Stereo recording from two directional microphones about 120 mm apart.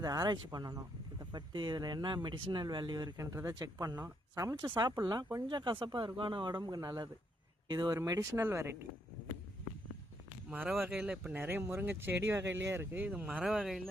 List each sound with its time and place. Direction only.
0.0 s speech: 30° right (ahead or behind)
4.5 s speech: 40° right (ahead or behind)
7.9 s speech: 30° right (ahead or behind)
10.5 s speech: 15° right (ahead or behind)
11.3 s speech: 20° right (ahead or behind)